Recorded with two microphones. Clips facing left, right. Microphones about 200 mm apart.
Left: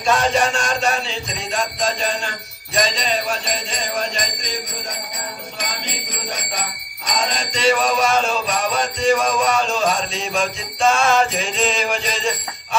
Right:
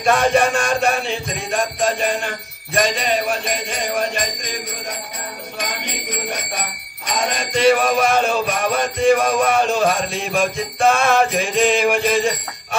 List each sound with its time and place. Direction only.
0.0 s music: 55° right (ahead or behind)
5.6 s bicycle bell: 60° right (ahead or behind)
7.2 s music: 55° right (ahead or behind)